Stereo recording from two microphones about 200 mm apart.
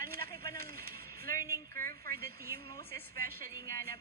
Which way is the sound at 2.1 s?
50° right (ahead or behind).